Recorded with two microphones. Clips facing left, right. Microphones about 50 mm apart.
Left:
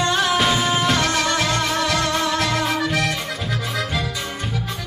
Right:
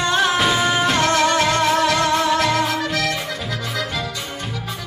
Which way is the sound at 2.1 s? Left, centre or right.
Centre.